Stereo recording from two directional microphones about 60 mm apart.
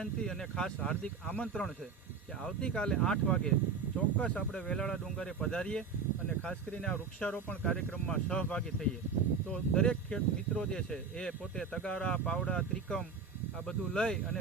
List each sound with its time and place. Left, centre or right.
0.0 s speech: centre